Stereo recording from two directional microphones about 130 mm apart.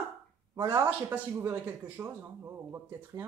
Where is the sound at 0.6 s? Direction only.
20° right (ahead or behind).